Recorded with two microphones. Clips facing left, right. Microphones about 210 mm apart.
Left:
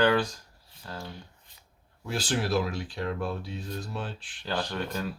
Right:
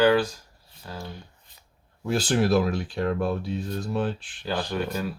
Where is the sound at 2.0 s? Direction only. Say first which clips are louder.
Right 7 dB; 50° right (ahead or behind).